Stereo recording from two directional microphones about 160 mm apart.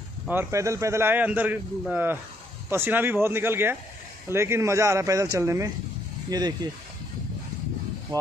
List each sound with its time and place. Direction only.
0.3 s a man's voice: 15° right (ahead or behind)